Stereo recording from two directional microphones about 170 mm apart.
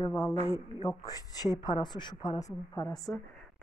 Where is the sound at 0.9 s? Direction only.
20° left (ahead or behind).